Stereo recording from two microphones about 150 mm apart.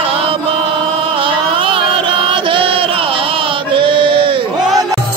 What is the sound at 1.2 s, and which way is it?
Chant, 35° right (ahead or behind).